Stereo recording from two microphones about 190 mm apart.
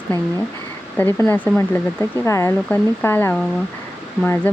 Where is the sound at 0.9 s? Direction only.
10° left (ahead or behind).